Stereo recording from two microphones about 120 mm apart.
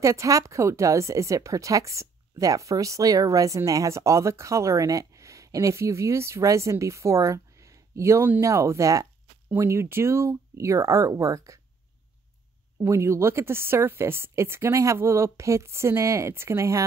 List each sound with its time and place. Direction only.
0.0 s speech: 25° right (ahead or behind)
12.8 s speech: 25° right (ahead or behind)